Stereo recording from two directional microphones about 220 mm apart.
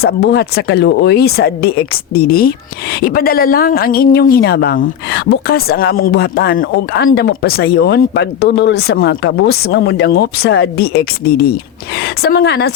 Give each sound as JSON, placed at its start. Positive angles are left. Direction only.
{"t": 0.0, "sound": "speech", "side_deg": 45}